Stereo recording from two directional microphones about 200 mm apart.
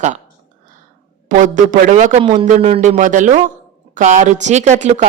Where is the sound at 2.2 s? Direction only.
25° right (ahead or behind).